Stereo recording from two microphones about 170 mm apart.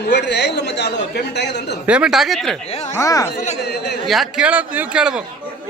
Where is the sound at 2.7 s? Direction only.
40° left (ahead or behind).